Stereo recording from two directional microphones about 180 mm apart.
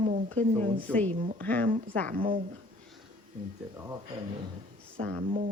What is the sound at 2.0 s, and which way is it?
Speech, 50° right (ahead or behind).